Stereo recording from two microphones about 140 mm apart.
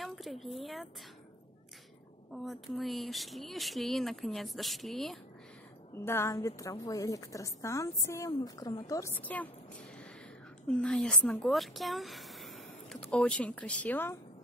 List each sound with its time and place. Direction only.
0.0 s speech: centre (ahead or behind)
2.3 s speech: centre (ahead or behind)
5.9 s a woman's voice: 20° left (ahead or behind)
9.1 s speech: 10° left (ahead or behind)
10.7 s speech: 5° left (ahead or behind)